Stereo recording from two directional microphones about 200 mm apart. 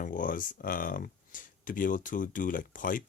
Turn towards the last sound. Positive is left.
turn(degrees=40)  # may be behind; listen again after turning